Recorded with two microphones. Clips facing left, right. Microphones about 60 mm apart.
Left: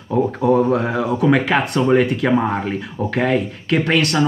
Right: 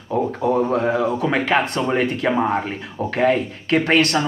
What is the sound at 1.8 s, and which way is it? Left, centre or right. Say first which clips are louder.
Speech: left 5 dB; centre.